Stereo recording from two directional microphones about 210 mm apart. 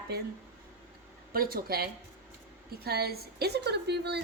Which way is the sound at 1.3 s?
45° right (ahead or behind).